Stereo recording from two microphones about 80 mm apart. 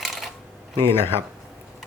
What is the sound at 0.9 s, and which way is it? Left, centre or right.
Speech, left.